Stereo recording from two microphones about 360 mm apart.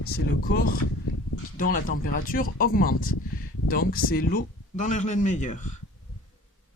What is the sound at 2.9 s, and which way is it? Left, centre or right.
Speech, left.